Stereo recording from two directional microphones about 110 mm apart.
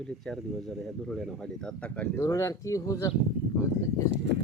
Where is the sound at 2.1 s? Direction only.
25° left (ahead or behind).